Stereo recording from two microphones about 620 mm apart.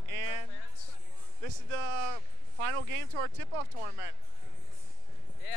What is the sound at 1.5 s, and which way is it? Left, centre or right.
Speech, right.